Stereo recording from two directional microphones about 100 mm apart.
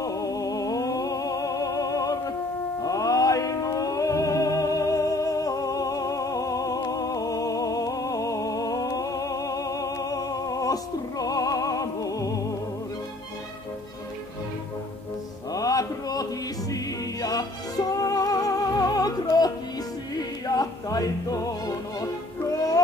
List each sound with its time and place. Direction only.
0.0 s music: 35° left (ahead or behind)
15.5 s music: 35° left (ahead or behind)